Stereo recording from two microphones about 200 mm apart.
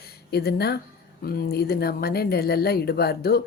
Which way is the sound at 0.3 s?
55° left (ahead or behind).